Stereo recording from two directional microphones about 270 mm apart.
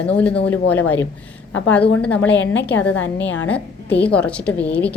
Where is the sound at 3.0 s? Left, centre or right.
Left.